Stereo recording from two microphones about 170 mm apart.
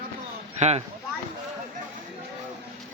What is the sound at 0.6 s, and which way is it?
Speech, 40° right (ahead or behind).